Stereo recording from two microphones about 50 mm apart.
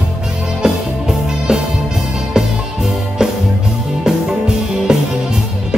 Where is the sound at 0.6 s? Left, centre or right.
Centre.